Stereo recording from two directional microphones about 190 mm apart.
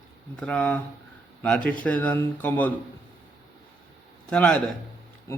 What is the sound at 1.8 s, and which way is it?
Speech, 10° left (ahead or behind).